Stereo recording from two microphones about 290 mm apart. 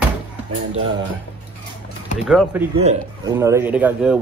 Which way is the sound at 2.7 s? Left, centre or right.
Right.